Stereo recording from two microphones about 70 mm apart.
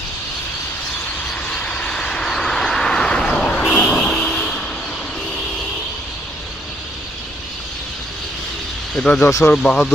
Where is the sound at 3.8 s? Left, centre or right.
Left.